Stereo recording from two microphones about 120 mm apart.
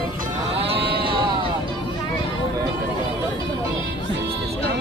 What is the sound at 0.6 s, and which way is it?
Sheep, 45° right (ahead or behind).